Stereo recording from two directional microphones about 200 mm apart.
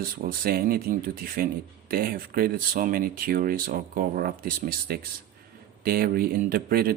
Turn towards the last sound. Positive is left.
turn(degrees=-45)  # may be behind; listen again after turning